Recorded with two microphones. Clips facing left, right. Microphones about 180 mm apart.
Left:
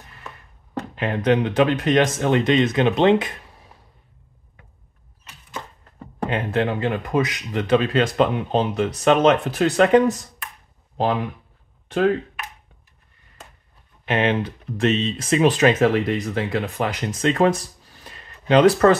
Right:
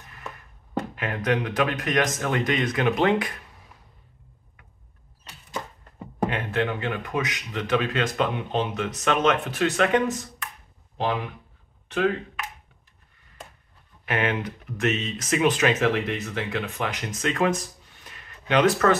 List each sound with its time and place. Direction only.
0.9 s speech: 30° left (ahead or behind)
6.3 s speech: 30° left (ahead or behind)
14.0 s speech: 25° left (ahead or behind)